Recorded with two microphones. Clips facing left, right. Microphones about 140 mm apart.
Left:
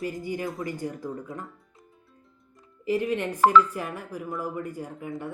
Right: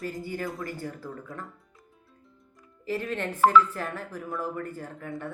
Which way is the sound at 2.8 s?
15° left (ahead or behind).